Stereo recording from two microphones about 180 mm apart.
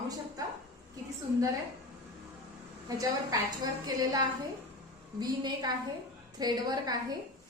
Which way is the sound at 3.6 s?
20° right (ahead or behind).